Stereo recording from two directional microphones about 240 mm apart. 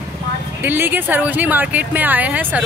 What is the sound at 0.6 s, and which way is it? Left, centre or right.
Speech, centre.